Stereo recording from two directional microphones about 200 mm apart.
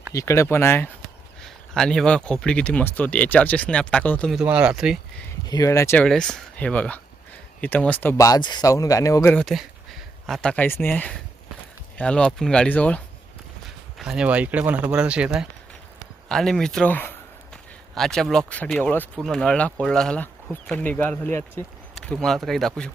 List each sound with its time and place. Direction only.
0.1 s speech: 15° left (ahead or behind); by 5.2 s centre (ahead or behind)
5.5 s speech: 15° left (ahead or behind)
14.0 s speech: 5° right (ahead or behind)